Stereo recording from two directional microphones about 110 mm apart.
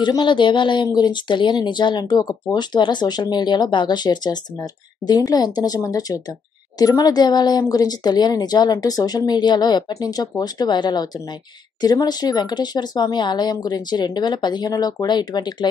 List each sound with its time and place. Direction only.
0.0 s speech: 45° left (ahead or behind)